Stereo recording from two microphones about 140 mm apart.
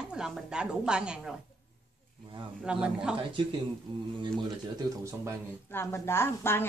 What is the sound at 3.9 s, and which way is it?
Speech, 35° right (ahead or behind).